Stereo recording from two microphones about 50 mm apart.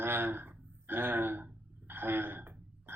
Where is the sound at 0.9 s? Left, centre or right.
Right.